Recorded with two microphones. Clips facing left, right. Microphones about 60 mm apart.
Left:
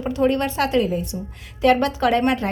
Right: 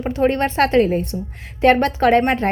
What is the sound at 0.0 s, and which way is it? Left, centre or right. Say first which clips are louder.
A woman's voice: right 2 dB; right.